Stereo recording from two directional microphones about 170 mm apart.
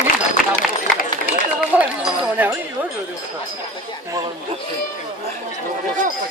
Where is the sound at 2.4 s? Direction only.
10° right (ahead or behind).